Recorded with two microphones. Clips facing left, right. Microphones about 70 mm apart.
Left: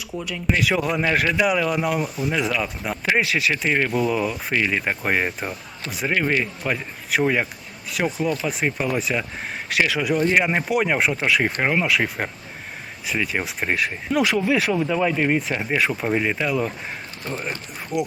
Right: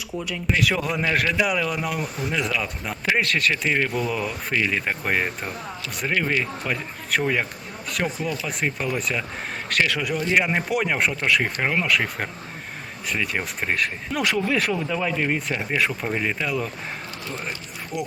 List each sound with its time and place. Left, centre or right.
0.1 s speech: centre
4.5 s speech: centre
6.1 s speech: centre
17.9 s speech: left